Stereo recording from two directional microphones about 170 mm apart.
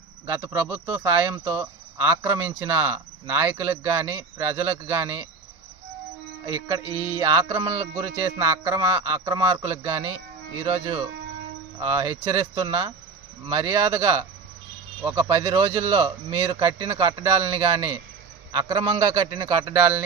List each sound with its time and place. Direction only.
0.3 s speech: 10° right (ahead or behind)
6.4 s music: 20° right (ahead or behind)
6.8 s music: 15° left (ahead or behind)
7.2 s a man's voice: 20° right (ahead or behind)
11.8 s a man's voice: 15° right (ahead or behind)